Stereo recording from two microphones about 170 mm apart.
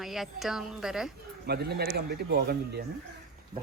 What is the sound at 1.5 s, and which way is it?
Speech, 70° right (ahead or behind).